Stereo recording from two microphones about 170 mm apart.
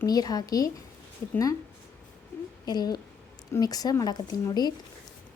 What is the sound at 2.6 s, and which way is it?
Speech, 25° left (ahead or behind).